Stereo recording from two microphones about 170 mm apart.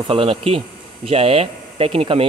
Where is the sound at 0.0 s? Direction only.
35° right (ahead or behind).